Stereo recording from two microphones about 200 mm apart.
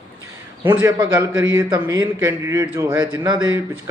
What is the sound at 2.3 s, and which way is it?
Speech, 15° right (ahead or behind).